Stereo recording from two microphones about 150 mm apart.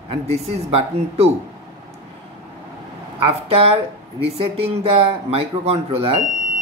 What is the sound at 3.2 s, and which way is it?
Speech, 40° right (ahead or behind).